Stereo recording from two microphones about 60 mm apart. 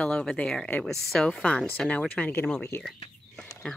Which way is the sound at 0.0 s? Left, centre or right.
Centre.